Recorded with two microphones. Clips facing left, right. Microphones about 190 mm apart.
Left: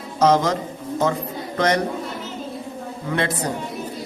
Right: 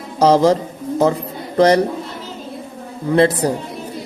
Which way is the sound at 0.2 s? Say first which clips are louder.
Right 5 dB; 35° right (ahead or behind).